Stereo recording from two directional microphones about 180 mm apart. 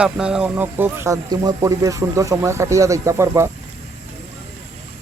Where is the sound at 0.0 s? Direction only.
5° right (ahead or behind).